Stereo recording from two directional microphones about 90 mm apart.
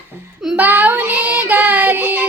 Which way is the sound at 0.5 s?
20° right (ahead or behind).